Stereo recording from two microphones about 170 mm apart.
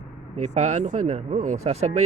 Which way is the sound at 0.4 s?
40° right (ahead or behind).